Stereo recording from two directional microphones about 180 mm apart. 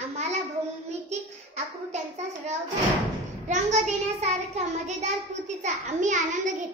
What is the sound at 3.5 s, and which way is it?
A child's voice, 40° right (ahead or behind).